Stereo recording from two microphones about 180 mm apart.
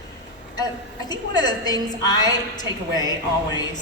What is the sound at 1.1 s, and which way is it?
A woman's voice, 20° left (ahead or behind).